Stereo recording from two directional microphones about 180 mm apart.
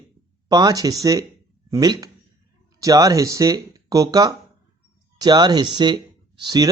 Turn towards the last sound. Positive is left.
turn(degrees=-25)  # may be behind; listen again after turning